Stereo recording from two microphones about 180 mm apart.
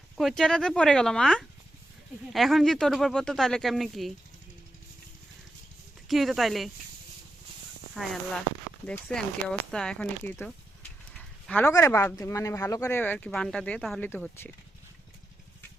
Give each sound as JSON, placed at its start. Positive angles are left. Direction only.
{"t": 0.2, "sound": "speech", "side_deg": 0}
{"t": 6.1, "sound": "speech", "side_deg": 0}
{"t": 8.9, "sound": "speech", "side_deg": 5}